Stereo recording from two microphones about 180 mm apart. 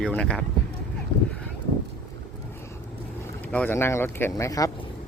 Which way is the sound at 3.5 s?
10° left (ahead or behind).